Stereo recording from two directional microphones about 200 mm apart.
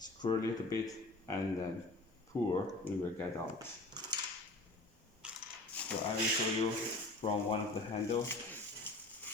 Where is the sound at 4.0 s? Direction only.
20° right (ahead or behind).